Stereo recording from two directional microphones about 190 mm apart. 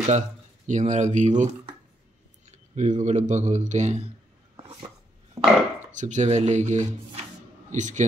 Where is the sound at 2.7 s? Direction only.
40° right (ahead or behind).